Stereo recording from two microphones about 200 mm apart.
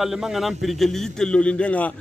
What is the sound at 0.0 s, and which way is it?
Speech, centre (ahead or behind).